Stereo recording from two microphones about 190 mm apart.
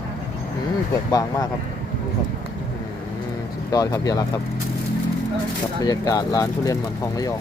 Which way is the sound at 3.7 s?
20° left (ahead or behind).